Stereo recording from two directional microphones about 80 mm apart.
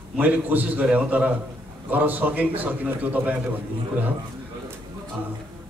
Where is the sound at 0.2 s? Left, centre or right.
Right.